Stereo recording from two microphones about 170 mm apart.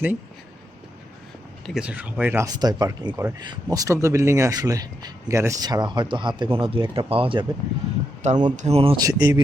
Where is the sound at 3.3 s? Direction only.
25° right (ahead or behind).